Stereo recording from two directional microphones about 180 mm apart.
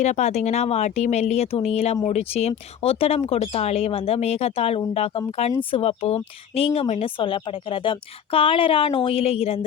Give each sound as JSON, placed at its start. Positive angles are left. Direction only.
{"t": 0.0, "sound": "speech", "side_deg": 40}